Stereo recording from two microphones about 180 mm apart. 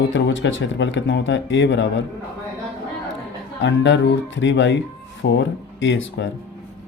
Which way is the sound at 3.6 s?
85° left.